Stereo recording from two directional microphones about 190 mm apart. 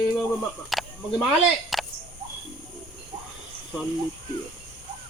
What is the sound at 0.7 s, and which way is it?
Snake, centre (ahead or behind).